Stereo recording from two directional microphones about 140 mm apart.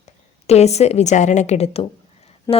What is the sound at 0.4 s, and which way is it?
A woman's voice, 50° left (ahead or behind).